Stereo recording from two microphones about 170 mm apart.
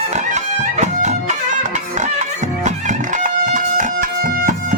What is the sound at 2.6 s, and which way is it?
Music, 45° right (ahead or behind).